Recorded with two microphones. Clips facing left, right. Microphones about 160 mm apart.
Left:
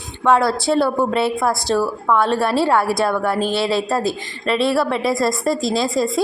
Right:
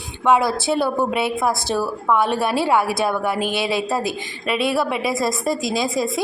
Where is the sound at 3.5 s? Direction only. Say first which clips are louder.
Left 3 dB; 20° right (ahead or behind).